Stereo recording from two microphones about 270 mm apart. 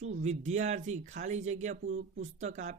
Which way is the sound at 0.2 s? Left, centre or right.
Right.